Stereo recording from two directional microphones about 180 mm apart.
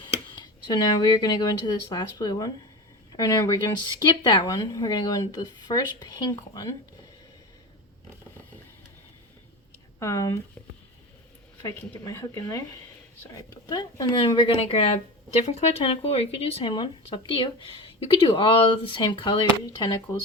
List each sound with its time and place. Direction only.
0.3 s speech: 25° left (ahead or behind)
10.0 s speech: 20° left (ahead or behind)
11.6 s speech: 20° left (ahead or behind)